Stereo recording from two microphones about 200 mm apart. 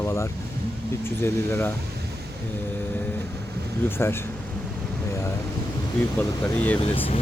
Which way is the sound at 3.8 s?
10° left (ahead or behind).